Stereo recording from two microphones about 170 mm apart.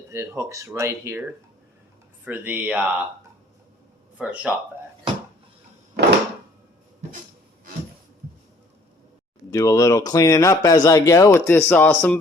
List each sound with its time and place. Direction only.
0.1 s speech: 15° right (ahead or behind)
4.2 s speech: 10° right (ahead or behind)
9.5 s speech: 20° left (ahead or behind)